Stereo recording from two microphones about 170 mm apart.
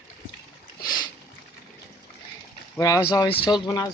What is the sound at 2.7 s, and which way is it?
Speech, 20° left (ahead or behind).